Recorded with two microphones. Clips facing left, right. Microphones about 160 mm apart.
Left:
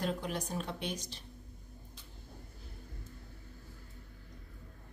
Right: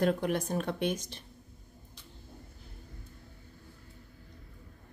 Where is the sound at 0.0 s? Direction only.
60° right (ahead or behind).